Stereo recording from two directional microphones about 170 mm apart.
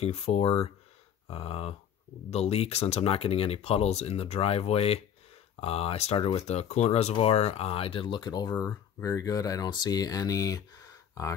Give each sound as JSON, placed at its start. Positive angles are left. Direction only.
{"t": 0.0, "sound": "speech", "side_deg": 35}